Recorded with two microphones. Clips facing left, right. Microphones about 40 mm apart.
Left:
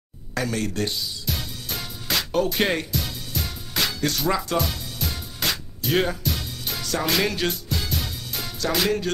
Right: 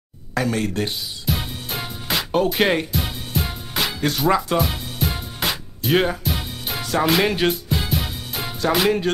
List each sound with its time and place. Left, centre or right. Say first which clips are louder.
0.3 s music: right 4 dB; right
3.7 s music: right 2 dB; centre
8.7 s speech: right 4 dB; right